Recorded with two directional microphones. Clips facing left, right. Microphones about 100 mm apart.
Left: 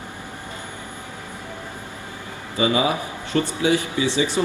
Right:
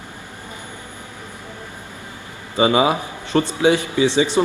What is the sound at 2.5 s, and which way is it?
A man's voice, 25° right (ahead or behind).